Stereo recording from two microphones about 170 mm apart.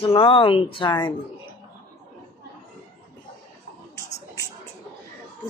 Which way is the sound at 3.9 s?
20° left (ahead or behind).